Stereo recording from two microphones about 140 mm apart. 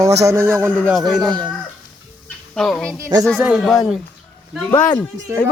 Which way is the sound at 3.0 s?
25° right (ahead or behind).